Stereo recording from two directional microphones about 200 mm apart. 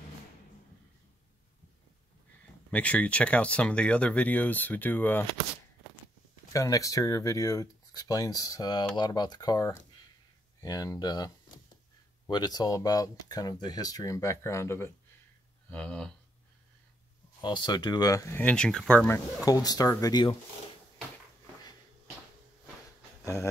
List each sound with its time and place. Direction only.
2.7 s speech: 5° left (ahead or behind)
6.5 s speech: 15° left (ahead or behind)
17.4 s speech: 20° left (ahead or behind)
23.2 s a sound: 15° left (ahead or behind)